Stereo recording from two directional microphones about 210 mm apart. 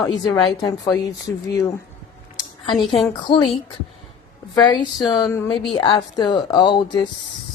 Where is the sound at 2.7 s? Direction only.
Centre (ahead or behind).